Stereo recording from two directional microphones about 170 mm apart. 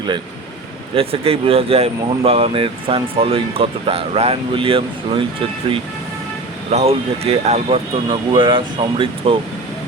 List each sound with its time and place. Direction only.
0.9 s speech: 35° right (ahead or behind)
6.7 s speech: 40° right (ahead or behind)